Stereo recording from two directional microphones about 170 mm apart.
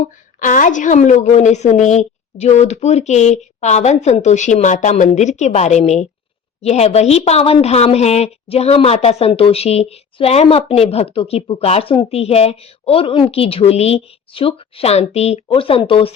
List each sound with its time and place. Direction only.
0.0 s a woman's voice: 50° left (ahead or behind); by 16.1 s 30° left (ahead or behind)